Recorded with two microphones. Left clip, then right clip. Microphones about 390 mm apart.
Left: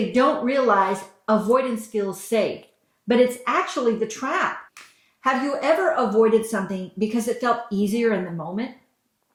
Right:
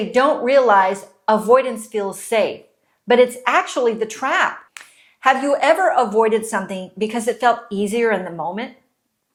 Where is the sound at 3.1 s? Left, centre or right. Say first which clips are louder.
Right 5 dB; right.